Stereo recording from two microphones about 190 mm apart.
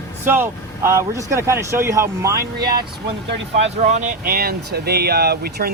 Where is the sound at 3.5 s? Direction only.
40° right (ahead or behind).